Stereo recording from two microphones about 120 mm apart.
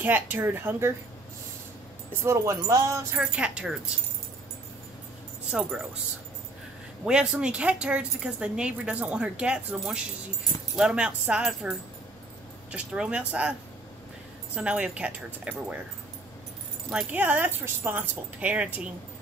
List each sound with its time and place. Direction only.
0.0 s speech: 15° right (ahead or behind)
2.2 s music: 25° right (ahead or behind)
3.2 s speech: 10° right (ahead or behind)
5.5 s speech: 10° right (ahead or behind)
7.1 s speech: 10° right (ahead or behind)
12.7 s speech: 10° right (ahead or behind)
17.1 s speech: 15° right (ahead or behind)